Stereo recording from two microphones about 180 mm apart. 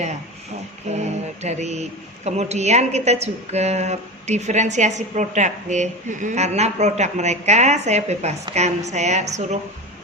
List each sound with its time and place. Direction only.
0.9 s speech: 40° right (ahead or behind)